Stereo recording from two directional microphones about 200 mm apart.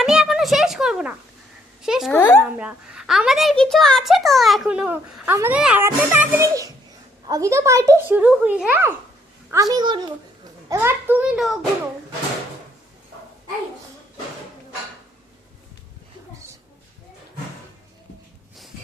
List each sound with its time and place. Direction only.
0.0 s a sound: centre (ahead or behind)
1.8 s a child's voice: centre (ahead or behind)
2.1 s speech: 10° left (ahead or behind)
2.4 s a child's voice: 5° right (ahead or behind)
9.5 s a woman's voice: 20° right (ahead or behind); by 11.6 s centre (ahead or behind)